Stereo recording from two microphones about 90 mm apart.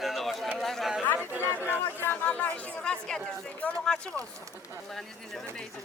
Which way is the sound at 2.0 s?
20° left (ahead or behind).